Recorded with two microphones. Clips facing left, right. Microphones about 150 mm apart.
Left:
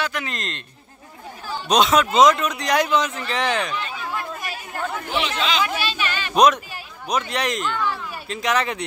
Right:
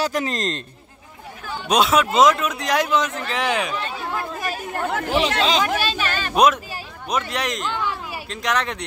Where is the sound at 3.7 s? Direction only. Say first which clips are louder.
Right 2 dB; 40° right (ahead or behind).